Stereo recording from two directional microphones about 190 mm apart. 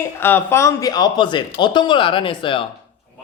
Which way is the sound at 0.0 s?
10° left (ahead or behind).